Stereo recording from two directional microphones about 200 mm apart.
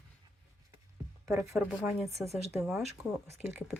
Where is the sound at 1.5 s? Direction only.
5° right (ahead or behind).